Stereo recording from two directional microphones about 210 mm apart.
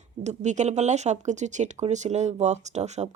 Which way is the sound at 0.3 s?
35° right (ahead or behind).